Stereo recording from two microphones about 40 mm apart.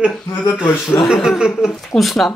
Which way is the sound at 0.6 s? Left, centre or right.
Left.